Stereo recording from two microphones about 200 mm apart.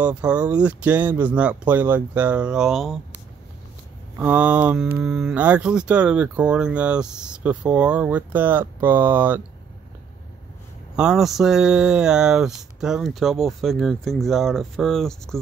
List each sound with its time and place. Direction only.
0.0 s speech: 5° right (ahead or behind)
4.2 s speech: 5° right (ahead or behind)
11.0 s speech: 5° right (ahead or behind)